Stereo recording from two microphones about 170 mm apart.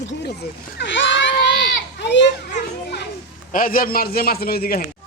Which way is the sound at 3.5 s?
55° left (ahead or behind).